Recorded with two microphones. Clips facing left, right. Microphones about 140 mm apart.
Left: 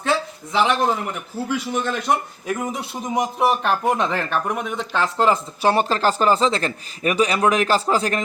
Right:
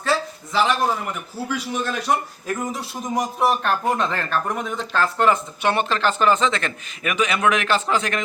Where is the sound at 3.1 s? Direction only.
20° left (ahead or behind).